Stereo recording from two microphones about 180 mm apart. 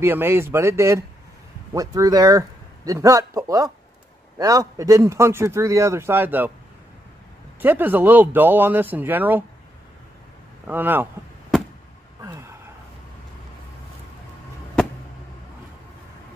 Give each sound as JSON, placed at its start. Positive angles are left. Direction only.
{"t": 0.0, "sound": "a man's voice", "side_deg": -10}
{"t": 7.6, "sound": "speech", "side_deg": -10}
{"t": 10.7, "sound": "speech", "side_deg": -10}
{"t": 12.2, "sound": "a sound", "side_deg": -15}